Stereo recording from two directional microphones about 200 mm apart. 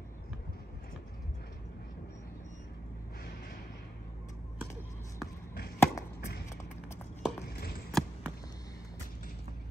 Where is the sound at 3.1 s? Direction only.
50° left (ahead or behind).